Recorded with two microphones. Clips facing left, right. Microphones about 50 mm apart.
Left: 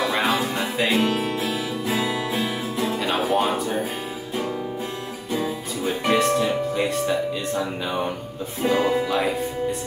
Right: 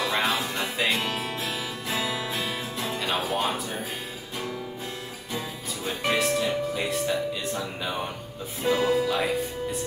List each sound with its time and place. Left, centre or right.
0.0 s music: centre
5.4 s music: centre
8.7 s speech: centre